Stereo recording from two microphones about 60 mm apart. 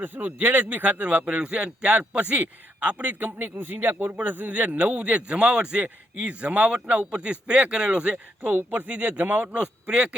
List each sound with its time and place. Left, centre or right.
0.0 s a man's voice: right
8.4 s a man's voice: right